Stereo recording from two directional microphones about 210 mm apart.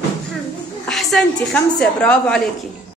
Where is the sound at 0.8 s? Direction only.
Centre (ahead or behind).